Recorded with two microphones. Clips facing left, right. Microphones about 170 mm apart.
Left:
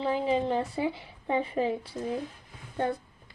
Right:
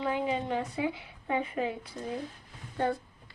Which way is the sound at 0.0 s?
30° left (ahead or behind).